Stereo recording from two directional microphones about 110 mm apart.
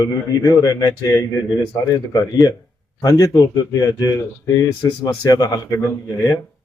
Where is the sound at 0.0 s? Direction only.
35° left (ahead or behind).